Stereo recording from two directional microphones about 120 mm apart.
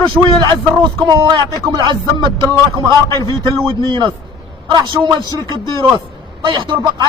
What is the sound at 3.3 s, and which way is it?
A man's voice, 35° right (ahead or behind).